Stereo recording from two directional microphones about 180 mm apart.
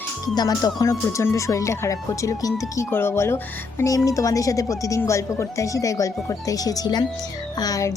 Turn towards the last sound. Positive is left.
turn(degrees=20)  # may be behind; listen again after turning